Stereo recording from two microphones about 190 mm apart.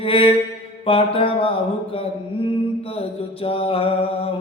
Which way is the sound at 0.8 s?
30° left (ahead or behind).